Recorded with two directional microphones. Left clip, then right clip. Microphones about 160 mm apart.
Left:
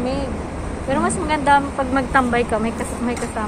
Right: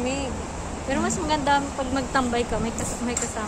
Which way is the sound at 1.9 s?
10° right (ahead or behind).